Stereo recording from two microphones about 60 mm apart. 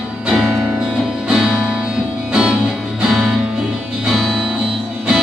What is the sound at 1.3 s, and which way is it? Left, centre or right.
Music, centre.